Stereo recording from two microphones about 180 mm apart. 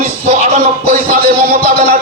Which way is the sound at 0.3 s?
45° right (ahead or behind).